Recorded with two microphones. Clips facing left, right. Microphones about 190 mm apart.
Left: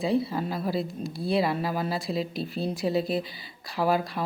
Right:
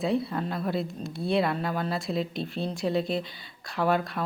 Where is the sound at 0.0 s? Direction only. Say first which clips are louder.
Left 1 dB; centre (ahead or behind).